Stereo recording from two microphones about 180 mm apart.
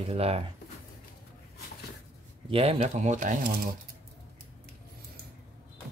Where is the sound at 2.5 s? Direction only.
35° right (ahead or behind); by 3.6 s 50° right (ahead or behind).